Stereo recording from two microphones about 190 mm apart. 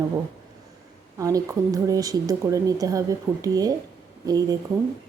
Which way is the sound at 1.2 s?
15° right (ahead or behind).